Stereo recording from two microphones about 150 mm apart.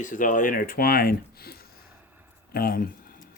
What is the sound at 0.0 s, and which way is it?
Speech, 60° left (ahead or behind).